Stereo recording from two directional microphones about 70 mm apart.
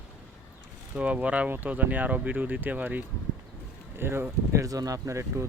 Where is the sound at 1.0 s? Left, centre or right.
Centre; by 4.6 s right.